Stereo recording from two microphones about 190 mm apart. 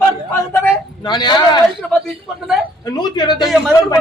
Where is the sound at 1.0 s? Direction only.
25° left (ahead or behind).